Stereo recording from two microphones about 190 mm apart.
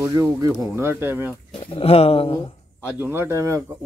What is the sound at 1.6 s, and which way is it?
Speech, 30° left (ahead or behind).